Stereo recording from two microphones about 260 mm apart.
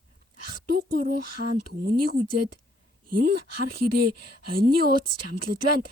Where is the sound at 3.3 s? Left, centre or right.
Right.